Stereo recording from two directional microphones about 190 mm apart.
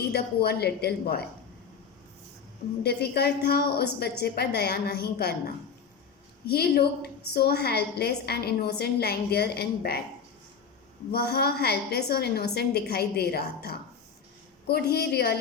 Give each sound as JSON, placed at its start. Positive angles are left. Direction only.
{"t": 0.1, "sound": "a woman's voice", "side_deg": 60}
{"t": 2.8, "sound": "a woman's voice", "side_deg": 55}
{"t": 11.1, "sound": "a woman's voice", "side_deg": 55}